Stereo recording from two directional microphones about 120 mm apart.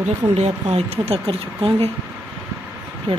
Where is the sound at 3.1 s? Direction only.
55° right (ahead or behind).